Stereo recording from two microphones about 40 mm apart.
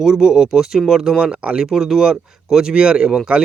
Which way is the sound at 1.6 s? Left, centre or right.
Centre.